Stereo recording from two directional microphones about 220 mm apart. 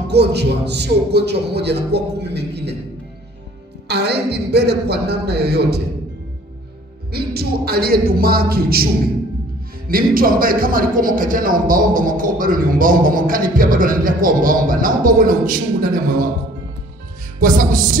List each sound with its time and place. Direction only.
0.1 s a man's voice: 50° right (ahead or behind)
3.8 s a man's voice: 50° right (ahead or behind)
7.1 s a man's voice: 45° right (ahead or behind)
17.4 s a man's voice: 35° right (ahead or behind)